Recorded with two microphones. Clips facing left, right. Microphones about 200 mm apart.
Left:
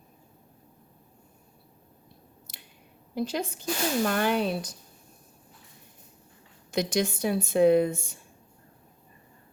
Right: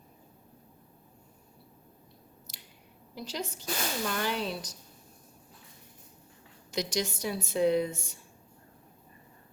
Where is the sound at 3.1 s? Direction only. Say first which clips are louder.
Left 8 dB; 55° left (ahead or behind).